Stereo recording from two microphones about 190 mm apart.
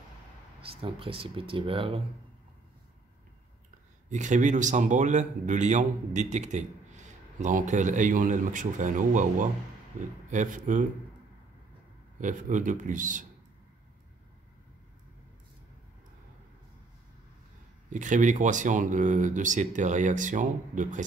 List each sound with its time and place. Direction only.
0.6 s speech: 30° right (ahead or behind)
4.1 s speech: 40° right (ahead or behind)
12.2 s speech: 40° right (ahead or behind)
17.8 s speech: 40° right (ahead or behind)